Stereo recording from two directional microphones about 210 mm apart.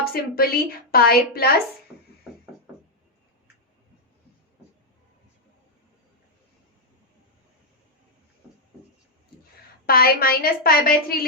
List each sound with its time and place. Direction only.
0.0 s speech: 45° left (ahead or behind)
9.8 s speech: 45° left (ahead or behind)